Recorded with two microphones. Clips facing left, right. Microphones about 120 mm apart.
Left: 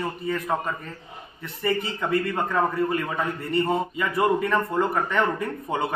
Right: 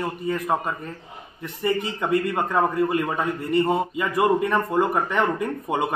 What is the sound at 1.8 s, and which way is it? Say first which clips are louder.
A man's voice: right 2 dB; 15° right (ahead or behind).